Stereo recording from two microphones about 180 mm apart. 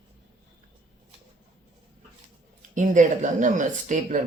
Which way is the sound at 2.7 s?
45° right (ahead or behind).